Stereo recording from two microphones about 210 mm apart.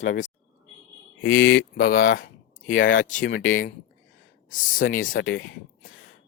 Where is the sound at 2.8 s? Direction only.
40° left (ahead or behind).